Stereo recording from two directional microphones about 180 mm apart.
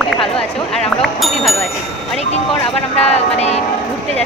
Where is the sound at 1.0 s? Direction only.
Centre (ahead or behind).